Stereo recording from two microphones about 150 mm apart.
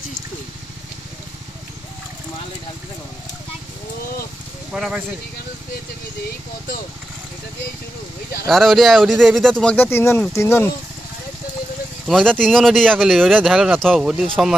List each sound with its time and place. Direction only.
4.7 s speech: 5° right (ahead or behind)
8.5 s speech: centre (ahead or behind); by 10.7 s 15° left (ahead or behind)
12.1 s speech: 5° left (ahead or behind)